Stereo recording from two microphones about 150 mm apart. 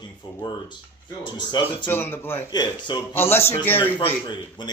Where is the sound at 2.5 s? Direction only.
30° left (ahead or behind).